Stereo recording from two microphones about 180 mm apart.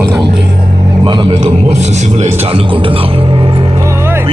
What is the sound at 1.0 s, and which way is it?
Speech, 25° right (ahead or behind).